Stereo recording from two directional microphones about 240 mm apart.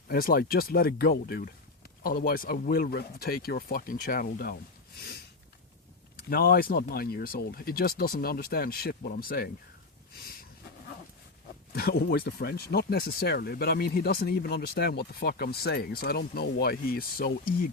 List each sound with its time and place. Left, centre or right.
0.1 s speech: left
6.1 s speech: left
11.7 s speech: left